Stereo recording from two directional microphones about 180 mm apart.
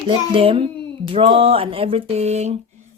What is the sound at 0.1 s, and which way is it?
A child's voice, 30° right (ahead or behind).